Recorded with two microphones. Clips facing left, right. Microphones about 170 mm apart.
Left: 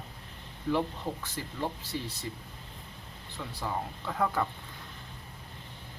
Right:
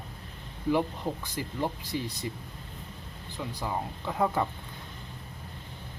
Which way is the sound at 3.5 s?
15° right (ahead or behind).